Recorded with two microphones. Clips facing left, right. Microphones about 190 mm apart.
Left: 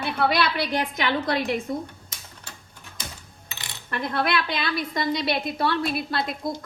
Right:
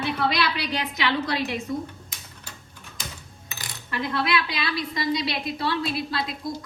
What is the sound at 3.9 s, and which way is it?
A woman's voice, 55° left (ahead or behind).